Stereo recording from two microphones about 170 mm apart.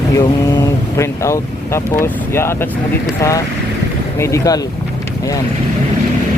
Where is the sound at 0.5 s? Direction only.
20° left (ahead or behind).